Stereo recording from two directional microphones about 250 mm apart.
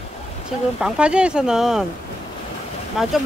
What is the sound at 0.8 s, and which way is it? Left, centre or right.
Speech, centre.